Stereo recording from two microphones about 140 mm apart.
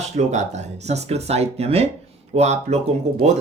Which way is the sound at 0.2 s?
55° right (ahead or behind).